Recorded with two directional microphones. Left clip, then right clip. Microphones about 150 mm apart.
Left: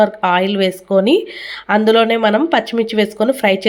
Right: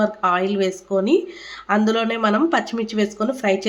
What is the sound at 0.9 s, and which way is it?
Speech, 40° left (ahead or behind).